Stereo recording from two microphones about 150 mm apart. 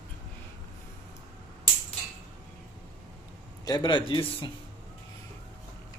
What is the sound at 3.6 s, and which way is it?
Speech, 30° left (ahead or behind).